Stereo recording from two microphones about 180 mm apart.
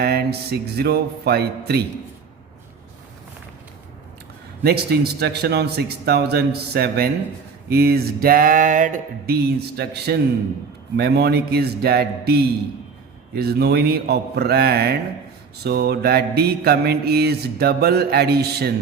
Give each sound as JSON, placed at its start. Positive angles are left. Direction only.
{"t": 0.0, "sound": "mantra", "side_deg": -60}
{"t": 4.6, "sound": "mantra", "side_deg": -60}